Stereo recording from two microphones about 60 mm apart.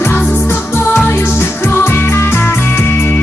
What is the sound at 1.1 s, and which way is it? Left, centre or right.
Music, left.